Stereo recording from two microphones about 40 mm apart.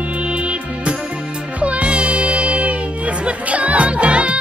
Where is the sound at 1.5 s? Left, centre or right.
Right.